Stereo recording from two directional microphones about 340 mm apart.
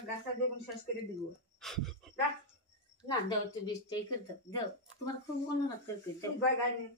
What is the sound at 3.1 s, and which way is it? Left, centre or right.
Speech, centre.